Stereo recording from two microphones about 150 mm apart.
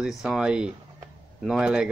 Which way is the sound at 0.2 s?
5° right (ahead or behind).